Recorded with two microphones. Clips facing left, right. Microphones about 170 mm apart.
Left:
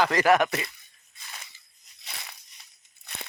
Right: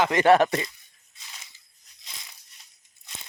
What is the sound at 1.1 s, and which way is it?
Crunch, 55° left (ahead or behind).